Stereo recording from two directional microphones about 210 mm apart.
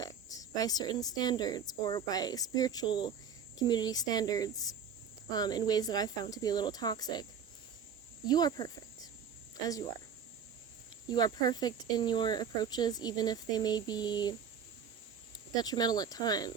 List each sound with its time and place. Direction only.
0.0 s speech: 15° left (ahead or behind)
8.3 s speech: 20° left (ahead or behind)
11.1 s speech: 20° left (ahead or behind)
15.5 s speech: 20° left (ahead or behind)